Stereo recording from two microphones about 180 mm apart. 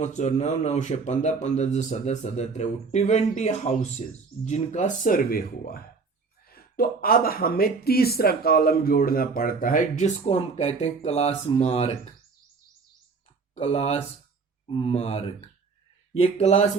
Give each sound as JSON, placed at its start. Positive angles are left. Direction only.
{"t": 0.0, "sound": "speech", "side_deg": 40}
{"t": 13.6, "sound": "speech", "side_deg": 35}